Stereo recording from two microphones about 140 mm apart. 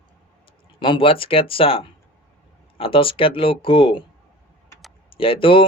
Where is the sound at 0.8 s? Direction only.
35° left (ahead or behind).